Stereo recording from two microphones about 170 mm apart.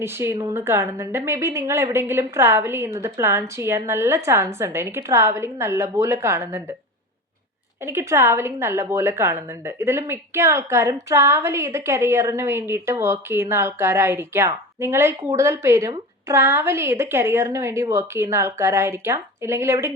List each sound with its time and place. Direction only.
0.0 s a woman's voice: 15° right (ahead or behind)
7.9 s a woman's voice: 15° right (ahead or behind)